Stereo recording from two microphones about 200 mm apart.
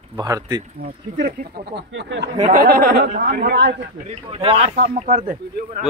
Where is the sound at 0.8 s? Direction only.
50° right (ahead or behind).